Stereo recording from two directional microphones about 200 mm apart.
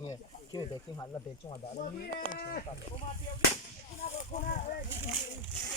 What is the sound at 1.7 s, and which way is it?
Speech, 40° left (ahead or behind).